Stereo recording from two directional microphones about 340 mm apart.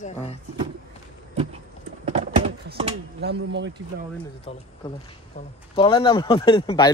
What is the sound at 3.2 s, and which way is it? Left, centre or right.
Speech, right.